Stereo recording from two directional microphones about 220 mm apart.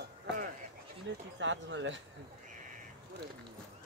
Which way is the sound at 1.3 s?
55° right (ahead or behind).